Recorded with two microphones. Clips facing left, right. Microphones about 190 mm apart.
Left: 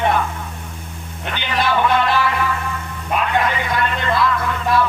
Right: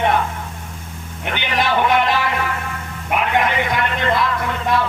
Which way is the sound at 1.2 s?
15° right (ahead or behind).